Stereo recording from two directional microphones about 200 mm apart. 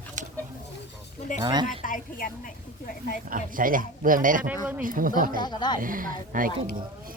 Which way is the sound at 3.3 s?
45° right (ahead or behind).